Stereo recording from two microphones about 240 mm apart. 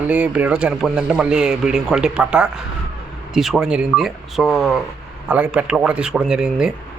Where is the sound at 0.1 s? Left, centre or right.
Centre.